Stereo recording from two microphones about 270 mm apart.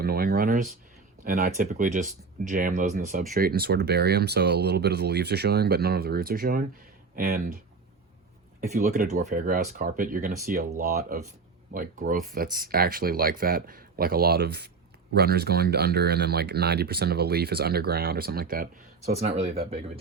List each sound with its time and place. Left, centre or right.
0.0 s speech: right
8.6 s speech: right